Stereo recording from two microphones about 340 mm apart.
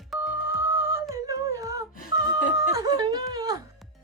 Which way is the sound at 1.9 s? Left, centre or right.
Left.